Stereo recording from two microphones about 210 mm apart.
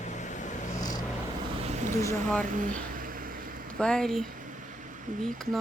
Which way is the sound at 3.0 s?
40° right (ahead or behind).